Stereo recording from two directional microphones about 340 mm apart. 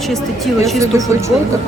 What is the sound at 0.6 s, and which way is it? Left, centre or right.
Speech, centre.